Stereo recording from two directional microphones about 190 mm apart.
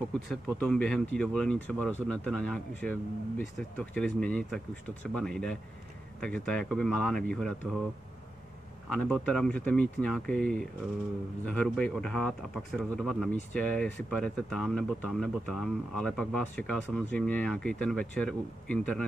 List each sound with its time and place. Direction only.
0.6 s speech: 5° left (ahead or behind)
8.8 s speech: centre (ahead or behind)